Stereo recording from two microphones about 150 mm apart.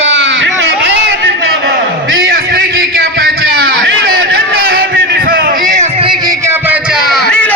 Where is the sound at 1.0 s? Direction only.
90° right; by 5.9 s 65° right (ahead or behind).